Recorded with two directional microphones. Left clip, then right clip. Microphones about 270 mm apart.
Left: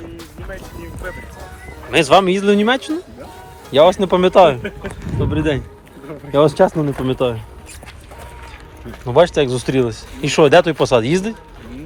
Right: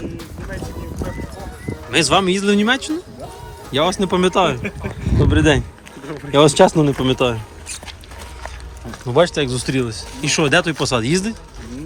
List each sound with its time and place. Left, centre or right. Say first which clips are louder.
1.9 s speech: left 4 dB; centre
9.0 s speech: left 3 dB; centre